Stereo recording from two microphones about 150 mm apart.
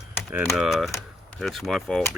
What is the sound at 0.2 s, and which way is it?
Typing, 5° right (ahead or behind).